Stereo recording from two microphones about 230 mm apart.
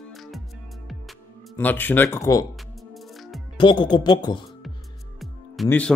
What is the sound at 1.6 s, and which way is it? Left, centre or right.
Speech, centre.